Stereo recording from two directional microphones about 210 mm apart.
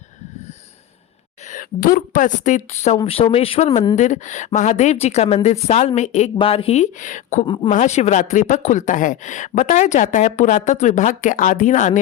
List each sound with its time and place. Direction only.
1.5 s speech: 40° left (ahead or behind)
7.4 s speech: 20° left (ahead or behind)
7.7 s speech: 35° left (ahead or behind)